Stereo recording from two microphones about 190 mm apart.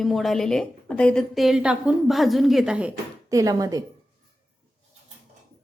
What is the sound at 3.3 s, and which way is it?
Speech, 20° right (ahead or behind).